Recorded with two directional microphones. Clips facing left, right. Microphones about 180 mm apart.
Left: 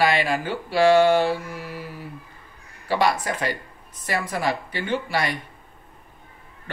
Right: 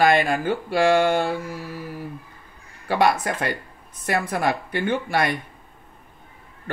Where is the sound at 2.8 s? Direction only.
50° right (ahead or behind).